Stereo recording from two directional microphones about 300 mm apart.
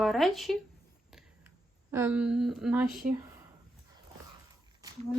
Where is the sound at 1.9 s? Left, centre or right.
Centre.